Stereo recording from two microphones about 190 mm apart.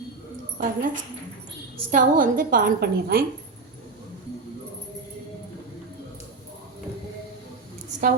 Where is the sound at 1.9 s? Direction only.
45° right (ahead or behind).